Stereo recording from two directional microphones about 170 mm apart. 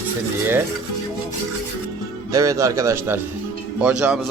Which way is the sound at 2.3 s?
20° right (ahead or behind).